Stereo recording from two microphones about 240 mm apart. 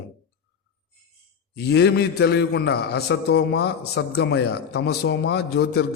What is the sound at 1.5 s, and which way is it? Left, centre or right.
A man's voice, left.